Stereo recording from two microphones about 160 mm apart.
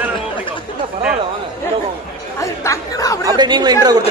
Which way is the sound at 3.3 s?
25° right (ahead or behind).